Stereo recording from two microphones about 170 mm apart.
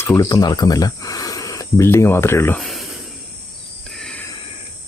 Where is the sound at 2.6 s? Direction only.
Centre (ahead or behind).